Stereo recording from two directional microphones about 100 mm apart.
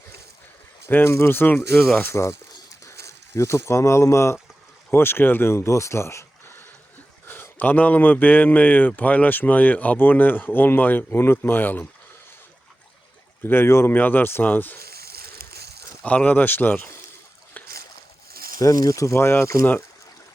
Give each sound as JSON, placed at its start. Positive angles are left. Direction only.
{"t": 0.9, "sound": "speech", "side_deg": 20}
{"t": 13.4, "sound": "speech", "side_deg": 25}
{"t": 16.0, "sound": "speech", "side_deg": 15}
{"t": 18.6, "sound": "speech", "side_deg": 35}